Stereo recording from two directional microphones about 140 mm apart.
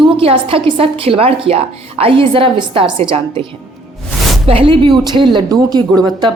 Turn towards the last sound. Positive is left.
turn(degrees=-30)  # may be behind; listen again after turning